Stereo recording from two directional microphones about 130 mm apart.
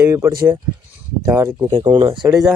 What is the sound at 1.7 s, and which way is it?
Speech, 40° right (ahead or behind).